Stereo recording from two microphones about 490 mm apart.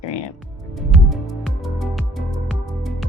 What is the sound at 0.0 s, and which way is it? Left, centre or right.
Music, left.